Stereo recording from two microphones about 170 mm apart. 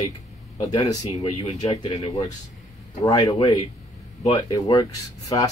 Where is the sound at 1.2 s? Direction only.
35° left (ahead or behind).